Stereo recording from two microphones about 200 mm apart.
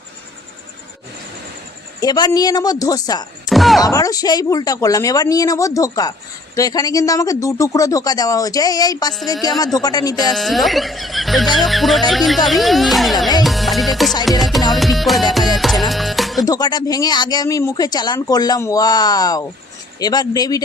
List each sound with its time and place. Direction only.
2.0 s speech: 20° left (ahead or behind)
3.5 s music: centre (ahead or behind)
3.8 s speech: 15° left (ahead or behind)
10.2 s speech: centre (ahead or behind)
11.5 s music: centre (ahead or behind)
16.4 s speech: 20° left (ahead or behind)